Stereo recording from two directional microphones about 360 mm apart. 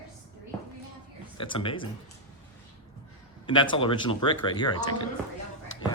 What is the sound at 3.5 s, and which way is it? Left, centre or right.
Speech, centre.